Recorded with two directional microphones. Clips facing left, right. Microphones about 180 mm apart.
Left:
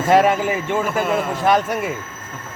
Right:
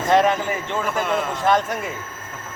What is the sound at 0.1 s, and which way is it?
A man's voice, 10° left (ahead or behind).